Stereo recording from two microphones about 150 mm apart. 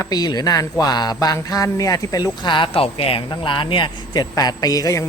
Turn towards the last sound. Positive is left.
turn(degrees=20)  # may be behind; listen again after turning